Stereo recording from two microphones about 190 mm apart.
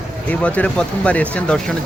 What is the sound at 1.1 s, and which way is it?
Speech, 5° left (ahead or behind).